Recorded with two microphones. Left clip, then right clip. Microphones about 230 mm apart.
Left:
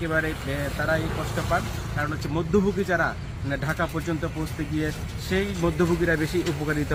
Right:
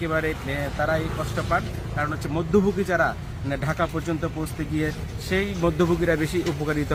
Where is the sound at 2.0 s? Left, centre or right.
Centre.